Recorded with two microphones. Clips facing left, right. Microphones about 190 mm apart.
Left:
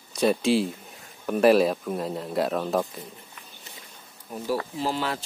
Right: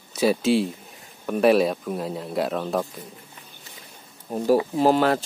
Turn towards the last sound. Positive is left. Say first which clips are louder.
# right 9 dB
turn(degrees=-50)  # may be behind; listen again after turning